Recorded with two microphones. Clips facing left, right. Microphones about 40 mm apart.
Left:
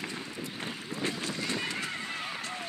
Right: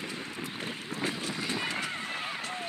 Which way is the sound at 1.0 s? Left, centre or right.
Right.